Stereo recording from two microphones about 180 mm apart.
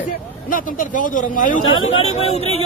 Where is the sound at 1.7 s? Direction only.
90° left.